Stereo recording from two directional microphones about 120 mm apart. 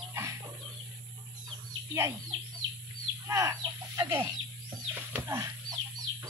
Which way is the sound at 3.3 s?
25° right (ahead or behind).